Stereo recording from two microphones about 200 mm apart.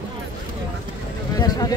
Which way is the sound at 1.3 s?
20° left (ahead or behind).